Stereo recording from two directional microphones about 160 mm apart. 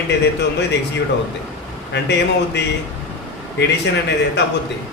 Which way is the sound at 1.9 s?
90° left.